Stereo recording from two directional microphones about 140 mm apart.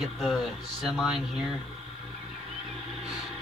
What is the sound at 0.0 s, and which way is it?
Speech, centre (ahead or behind).